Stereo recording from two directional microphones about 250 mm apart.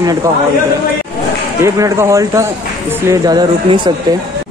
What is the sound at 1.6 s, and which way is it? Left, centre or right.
Speech, centre.